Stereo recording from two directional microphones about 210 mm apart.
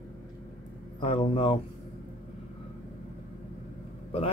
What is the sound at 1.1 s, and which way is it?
Speech, 25° left (ahead or behind).